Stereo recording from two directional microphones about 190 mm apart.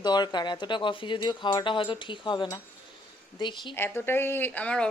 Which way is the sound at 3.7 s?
10° left (ahead or behind).